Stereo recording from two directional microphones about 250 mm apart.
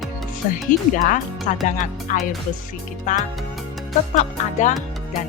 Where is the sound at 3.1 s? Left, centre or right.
Left.